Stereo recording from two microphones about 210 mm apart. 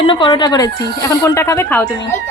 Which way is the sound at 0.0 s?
25° left (ahead or behind).